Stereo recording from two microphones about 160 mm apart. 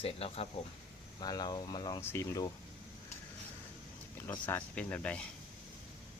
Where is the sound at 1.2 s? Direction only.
25° left (ahead or behind).